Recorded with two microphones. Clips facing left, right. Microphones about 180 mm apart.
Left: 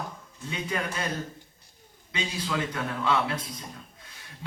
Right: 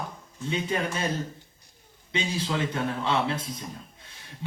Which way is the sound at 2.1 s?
25° right (ahead or behind).